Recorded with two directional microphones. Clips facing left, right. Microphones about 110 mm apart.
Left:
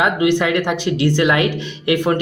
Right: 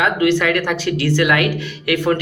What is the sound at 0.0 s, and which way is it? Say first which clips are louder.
Speech: even; 20° left (ahead or behind).